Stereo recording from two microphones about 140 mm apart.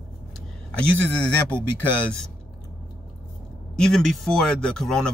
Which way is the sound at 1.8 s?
5° left (ahead or behind).